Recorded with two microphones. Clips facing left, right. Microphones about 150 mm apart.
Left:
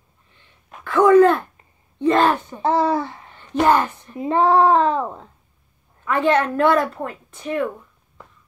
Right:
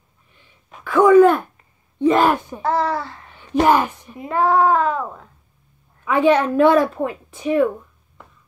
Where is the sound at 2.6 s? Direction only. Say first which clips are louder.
Left 2 dB; 20° left (ahead or behind).